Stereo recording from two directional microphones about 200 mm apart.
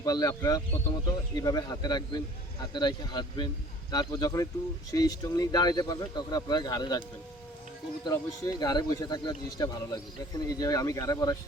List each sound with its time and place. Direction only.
0.0 s speech: 20° left (ahead or behind)
8.0 s speech: 20° left (ahead or behind)